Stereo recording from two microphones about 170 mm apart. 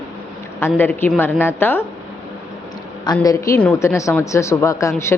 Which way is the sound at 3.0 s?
20° left (ahead or behind).